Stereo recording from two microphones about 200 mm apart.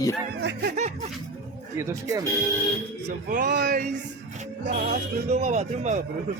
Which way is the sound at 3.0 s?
40° right (ahead or behind).